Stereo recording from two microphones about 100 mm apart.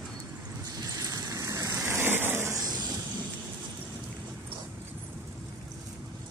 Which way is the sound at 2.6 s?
45° right (ahead or behind).